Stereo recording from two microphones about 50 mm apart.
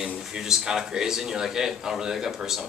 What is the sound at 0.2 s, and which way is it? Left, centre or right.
A man's voice, centre.